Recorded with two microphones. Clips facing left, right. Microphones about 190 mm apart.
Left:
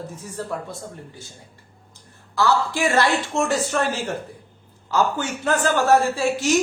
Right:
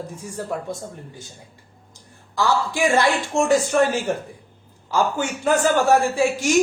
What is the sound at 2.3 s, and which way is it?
A woman's voice, 15° right (ahead or behind).